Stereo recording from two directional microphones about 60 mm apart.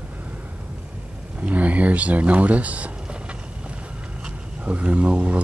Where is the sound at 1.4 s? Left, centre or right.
Right.